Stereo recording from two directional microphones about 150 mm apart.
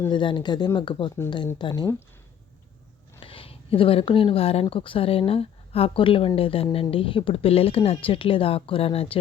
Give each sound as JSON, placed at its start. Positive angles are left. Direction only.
{"t": 0.1, "sound": "speech", "side_deg": 30}
{"t": 3.2, "sound": "speech", "side_deg": 35}